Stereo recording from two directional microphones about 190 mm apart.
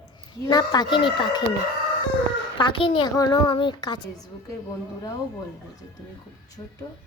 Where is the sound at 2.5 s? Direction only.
25° left (ahead or behind).